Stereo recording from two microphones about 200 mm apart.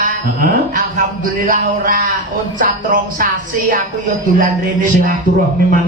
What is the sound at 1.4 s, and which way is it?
Speech, 40° right (ahead or behind).